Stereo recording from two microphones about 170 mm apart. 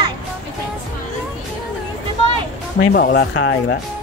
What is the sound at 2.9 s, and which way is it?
Speech, 75° left (ahead or behind).